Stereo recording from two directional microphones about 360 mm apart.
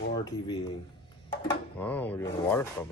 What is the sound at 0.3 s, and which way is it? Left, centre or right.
Speech, centre.